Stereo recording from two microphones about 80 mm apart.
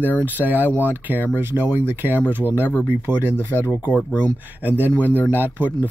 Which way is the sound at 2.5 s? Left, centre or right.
Left.